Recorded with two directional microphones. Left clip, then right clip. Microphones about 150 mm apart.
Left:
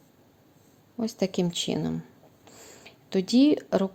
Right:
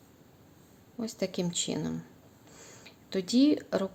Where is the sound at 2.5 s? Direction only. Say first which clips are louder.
Left 2 dB; 25° left (ahead or behind).